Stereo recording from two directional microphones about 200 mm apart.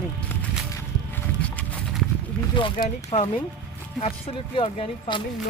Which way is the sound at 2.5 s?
25° left (ahead or behind).